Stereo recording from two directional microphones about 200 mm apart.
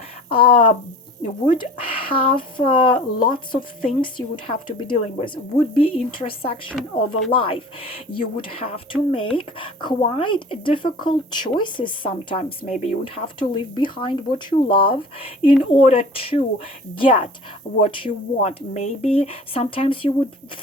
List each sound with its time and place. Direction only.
0.3 s speech: 25° left (ahead or behind)
6.7 s a woman's voice: centre (ahead or behind)
7.3 s speech: 25° left (ahead or behind)